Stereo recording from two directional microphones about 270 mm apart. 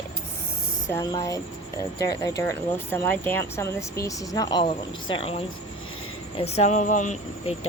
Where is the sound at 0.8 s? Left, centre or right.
Centre.